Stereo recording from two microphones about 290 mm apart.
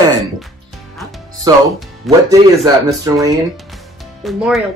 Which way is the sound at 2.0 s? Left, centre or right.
Centre.